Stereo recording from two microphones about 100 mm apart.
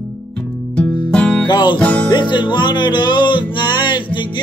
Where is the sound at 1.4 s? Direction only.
50° left (ahead or behind).